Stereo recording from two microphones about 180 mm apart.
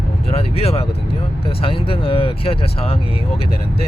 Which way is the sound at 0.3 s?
35° left (ahead or behind).